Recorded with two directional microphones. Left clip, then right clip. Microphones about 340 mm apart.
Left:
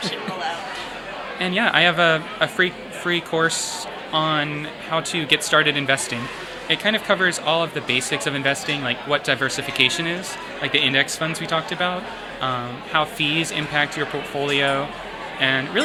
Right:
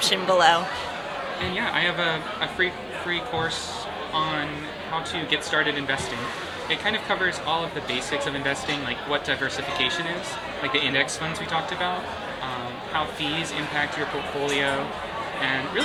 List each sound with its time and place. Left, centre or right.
0.0 s speech: right
1.5 s speech: left
12.9 s speech: left
15.4 s speech: left